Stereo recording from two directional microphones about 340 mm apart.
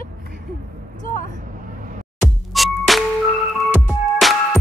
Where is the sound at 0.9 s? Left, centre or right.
Left.